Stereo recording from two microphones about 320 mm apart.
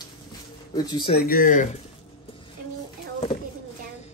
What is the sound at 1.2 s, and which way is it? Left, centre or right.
Speech, left.